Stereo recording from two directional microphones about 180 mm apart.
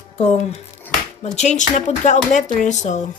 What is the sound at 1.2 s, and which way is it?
Speech, 40° left (ahead or behind).